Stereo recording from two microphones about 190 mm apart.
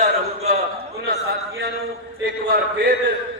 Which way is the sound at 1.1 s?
55° right (ahead or behind).